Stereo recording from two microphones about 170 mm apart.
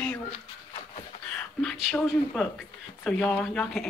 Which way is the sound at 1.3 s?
5° left (ahead or behind).